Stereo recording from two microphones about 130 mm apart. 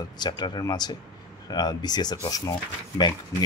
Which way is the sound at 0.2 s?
30° left (ahead or behind).